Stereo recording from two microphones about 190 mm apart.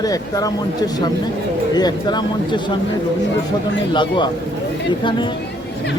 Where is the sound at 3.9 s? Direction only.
25° left (ahead or behind).